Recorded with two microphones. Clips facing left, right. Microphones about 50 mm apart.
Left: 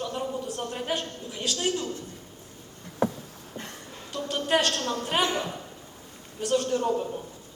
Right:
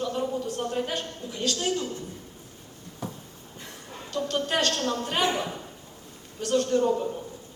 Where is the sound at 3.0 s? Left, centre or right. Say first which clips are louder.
Left 10 dB; left.